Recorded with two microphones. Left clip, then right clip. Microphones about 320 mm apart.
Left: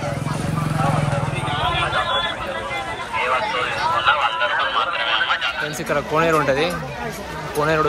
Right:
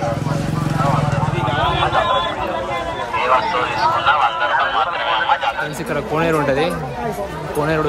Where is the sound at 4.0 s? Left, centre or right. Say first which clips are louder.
Right 2 dB; right.